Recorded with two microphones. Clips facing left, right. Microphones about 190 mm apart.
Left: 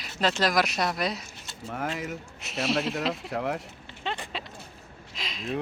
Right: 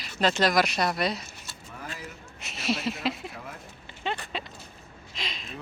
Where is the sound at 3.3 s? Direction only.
70° left (ahead or behind).